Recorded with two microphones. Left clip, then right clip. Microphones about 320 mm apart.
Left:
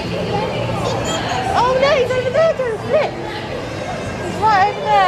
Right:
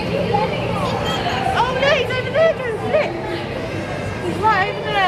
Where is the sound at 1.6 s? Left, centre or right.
Centre.